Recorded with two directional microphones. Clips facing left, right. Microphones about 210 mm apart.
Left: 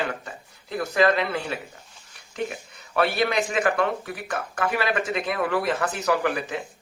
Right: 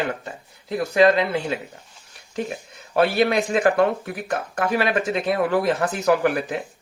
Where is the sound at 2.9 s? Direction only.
30° right (ahead or behind).